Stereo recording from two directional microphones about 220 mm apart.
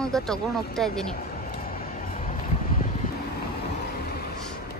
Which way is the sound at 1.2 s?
40° left (ahead or behind).